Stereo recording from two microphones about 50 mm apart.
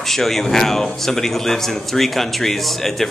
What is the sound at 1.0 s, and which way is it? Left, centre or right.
Speech, centre.